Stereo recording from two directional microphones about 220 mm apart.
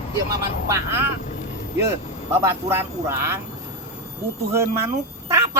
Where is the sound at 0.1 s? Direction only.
15° right (ahead or behind).